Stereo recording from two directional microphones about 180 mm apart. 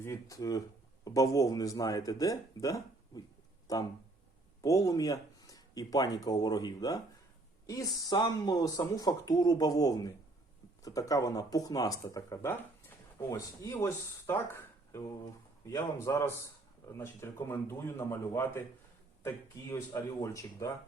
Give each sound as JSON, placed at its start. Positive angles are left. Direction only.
{"t": 0.0, "sound": "a man's voice", "side_deg": 15}
{"t": 19.7, "sound": "a man's voice", "side_deg": 15}